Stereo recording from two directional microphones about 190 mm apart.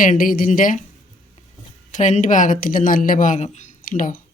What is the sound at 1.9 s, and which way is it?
Speech, 40° left (ahead or behind).